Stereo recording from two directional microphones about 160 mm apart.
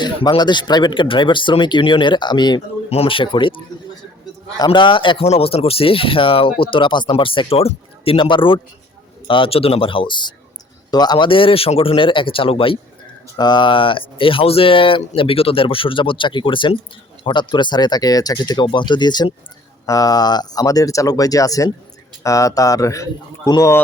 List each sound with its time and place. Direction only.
0.0 s a man's voice: 30° left (ahead or behind)